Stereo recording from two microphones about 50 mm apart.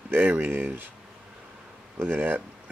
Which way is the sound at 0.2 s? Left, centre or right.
Right.